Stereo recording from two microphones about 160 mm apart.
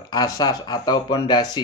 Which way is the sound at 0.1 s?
25° left (ahead or behind).